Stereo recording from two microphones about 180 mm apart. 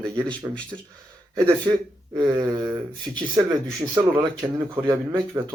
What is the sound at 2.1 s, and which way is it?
Speech, 25° right (ahead or behind).